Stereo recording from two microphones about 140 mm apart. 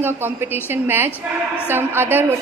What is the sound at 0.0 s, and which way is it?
A man's voice, 15° right (ahead or behind).